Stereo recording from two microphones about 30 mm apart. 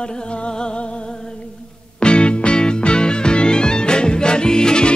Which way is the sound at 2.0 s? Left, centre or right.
Left.